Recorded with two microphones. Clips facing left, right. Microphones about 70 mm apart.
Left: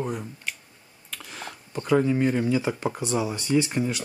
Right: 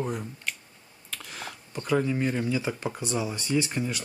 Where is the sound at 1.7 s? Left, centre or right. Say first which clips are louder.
Left 4 dB; centre.